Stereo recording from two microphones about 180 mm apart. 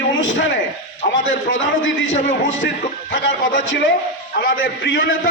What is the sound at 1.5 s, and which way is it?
Speech, 90° left.